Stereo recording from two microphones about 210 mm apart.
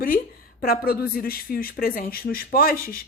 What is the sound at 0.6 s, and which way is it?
Speech, 45° left (ahead or behind).